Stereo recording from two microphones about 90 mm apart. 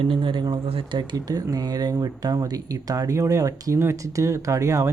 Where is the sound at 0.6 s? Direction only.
75° right (ahead or behind); by 1.1 s 60° right (ahead or behind).